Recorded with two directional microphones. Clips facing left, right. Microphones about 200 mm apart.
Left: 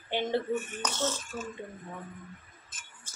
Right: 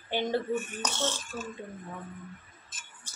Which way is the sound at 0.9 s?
30° right (ahead or behind).